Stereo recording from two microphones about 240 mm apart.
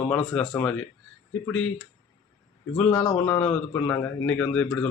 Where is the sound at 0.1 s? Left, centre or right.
Centre.